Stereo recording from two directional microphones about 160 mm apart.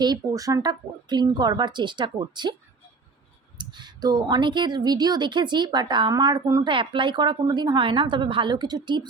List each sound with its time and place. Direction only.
0.0 s speech: 25° right (ahead or behind)
3.6 s speech: 30° right (ahead or behind)